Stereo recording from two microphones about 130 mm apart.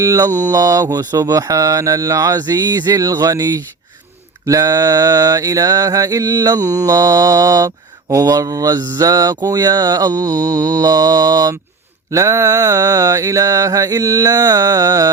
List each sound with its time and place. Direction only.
0.0 s mantra: 25° right (ahead or behind)